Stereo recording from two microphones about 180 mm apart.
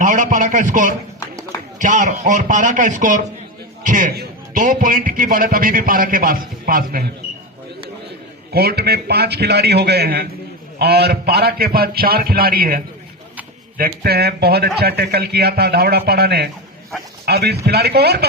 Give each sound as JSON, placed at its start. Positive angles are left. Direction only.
{"t": 0.0, "sound": "a man's voice", "side_deg": -45}
{"t": 4.1, "sound": "a sound", "side_deg": -60}
{"t": 4.6, "sound": "a man's voice", "side_deg": -45}
{"t": 8.5, "sound": "a man's voice", "side_deg": -60}